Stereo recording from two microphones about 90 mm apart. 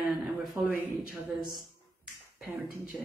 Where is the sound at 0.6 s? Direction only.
25° right (ahead or behind).